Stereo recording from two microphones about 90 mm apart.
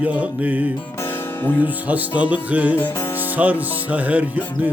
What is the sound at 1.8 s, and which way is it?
Music, 15° right (ahead or behind).